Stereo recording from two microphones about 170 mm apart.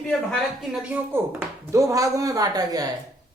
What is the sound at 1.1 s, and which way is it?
Speech, 10° right (ahead or behind).